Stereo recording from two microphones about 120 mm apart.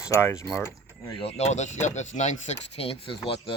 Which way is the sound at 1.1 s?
55° left (ahead or behind).